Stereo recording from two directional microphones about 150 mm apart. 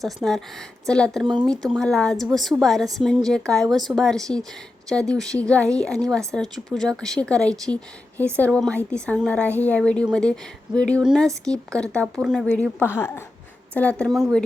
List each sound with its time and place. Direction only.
0.0 s speech: centre (ahead or behind)
11.0 s speech: 5° right (ahead or behind)
12.5 s speech: 10° left (ahead or behind)